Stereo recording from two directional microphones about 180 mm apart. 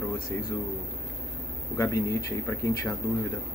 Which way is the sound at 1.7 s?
15° left (ahead or behind).